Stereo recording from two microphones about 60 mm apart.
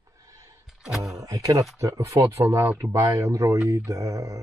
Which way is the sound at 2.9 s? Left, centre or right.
Right.